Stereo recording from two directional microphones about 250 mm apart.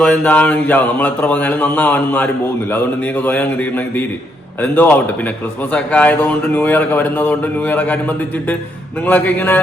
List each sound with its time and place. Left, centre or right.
0.0 s speech: centre
9.0 s speech: centre